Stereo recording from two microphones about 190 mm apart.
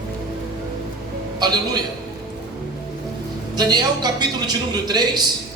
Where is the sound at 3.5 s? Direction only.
20° right (ahead or behind).